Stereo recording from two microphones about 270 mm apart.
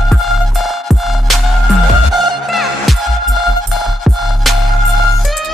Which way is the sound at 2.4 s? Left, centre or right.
Centre.